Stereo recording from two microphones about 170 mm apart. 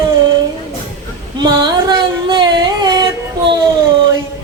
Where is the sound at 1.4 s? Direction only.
25° right (ahead or behind).